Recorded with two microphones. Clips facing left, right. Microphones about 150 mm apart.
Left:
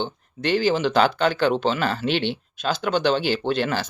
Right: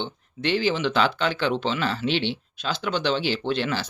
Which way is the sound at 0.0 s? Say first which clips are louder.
Left 2 dB; 45° left (ahead or behind).